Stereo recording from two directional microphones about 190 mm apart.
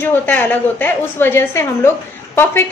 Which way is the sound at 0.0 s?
10° left (ahead or behind).